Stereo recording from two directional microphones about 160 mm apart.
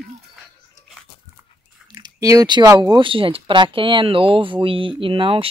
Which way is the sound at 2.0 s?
25° right (ahead or behind).